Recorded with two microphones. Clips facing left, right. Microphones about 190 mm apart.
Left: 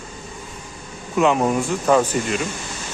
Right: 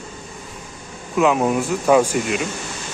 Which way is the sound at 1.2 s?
5° right (ahead or behind).